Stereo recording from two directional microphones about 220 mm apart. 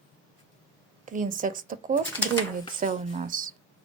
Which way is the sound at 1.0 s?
35° right (ahead or behind).